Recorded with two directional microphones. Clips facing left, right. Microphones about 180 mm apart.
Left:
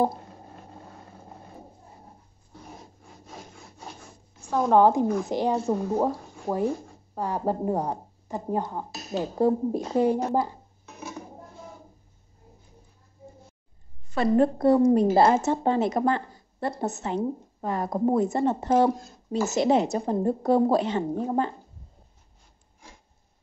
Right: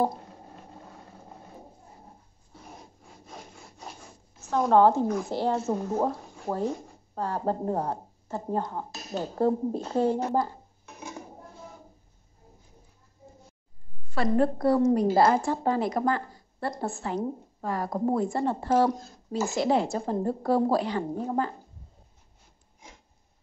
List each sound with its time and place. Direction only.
3.3 s wood: centre (ahead or behind)
4.4 s a woman's voice: 5° left (ahead or behind)
6.5 s speech: 5° right (ahead or behind)
7.2 s speech: 10° left (ahead or behind)
14.1 s a woman's voice: 20° left (ahead or behind)